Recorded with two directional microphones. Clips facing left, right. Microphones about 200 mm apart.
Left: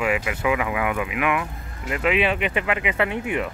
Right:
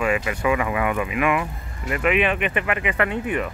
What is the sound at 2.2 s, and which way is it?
Speech, 15° left (ahead or behind).